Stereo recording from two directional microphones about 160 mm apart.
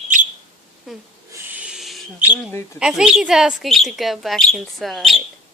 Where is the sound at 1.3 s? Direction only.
15° right (ahead or behind).